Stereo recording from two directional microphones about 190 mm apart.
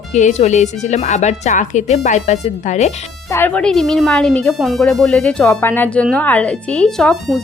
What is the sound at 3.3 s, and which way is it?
Speech, 10° left (ahead or behind).